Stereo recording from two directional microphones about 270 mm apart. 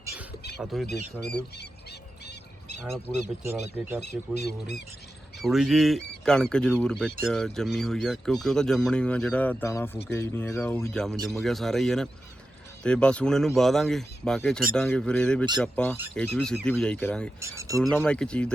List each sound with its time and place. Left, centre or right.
0.6 s speech: centre
2.2 s duck: left
3.4 s speech: centre
4.4 s speech: left
5.4 s speech: centre
17.4 s speech: centre
17.7 s speech: centre